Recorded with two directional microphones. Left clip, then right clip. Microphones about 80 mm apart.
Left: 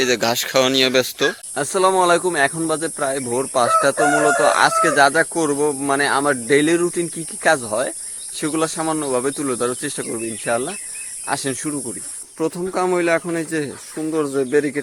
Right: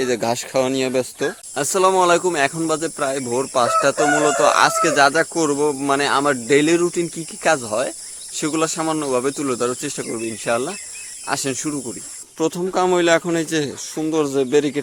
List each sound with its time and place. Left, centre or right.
0.0 s speech: centre
1.5 s speech: centre
4.1 s speech: right; by 10.2 s centre
10.4 s speech: right
12.4 s speech: centre
13.3 s speech: right
14.3 s speech: centre